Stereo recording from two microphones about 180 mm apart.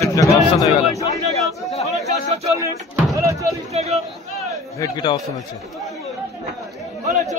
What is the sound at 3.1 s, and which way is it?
Music, 15° right (ahead or behind).